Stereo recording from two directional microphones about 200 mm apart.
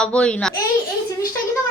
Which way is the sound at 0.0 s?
5° left (ahead or behind).